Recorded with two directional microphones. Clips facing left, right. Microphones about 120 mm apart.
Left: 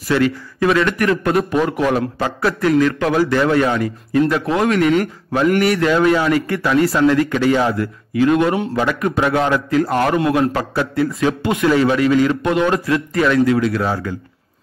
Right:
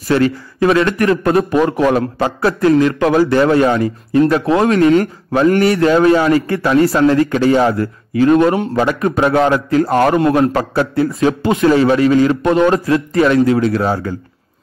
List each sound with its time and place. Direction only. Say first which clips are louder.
0.1 s a man's voice: right 3 dB; 35° right (ahead or behind)
2.2 s a man's voice: right 5 dB; 30° right (ahead or behind)